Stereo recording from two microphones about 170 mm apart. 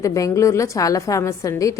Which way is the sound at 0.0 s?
20° left (ahead or behind).